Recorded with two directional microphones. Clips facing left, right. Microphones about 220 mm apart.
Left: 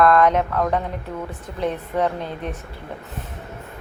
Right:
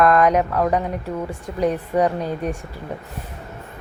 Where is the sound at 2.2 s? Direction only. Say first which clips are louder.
Right 5 dB; 40° right (ahead or behind).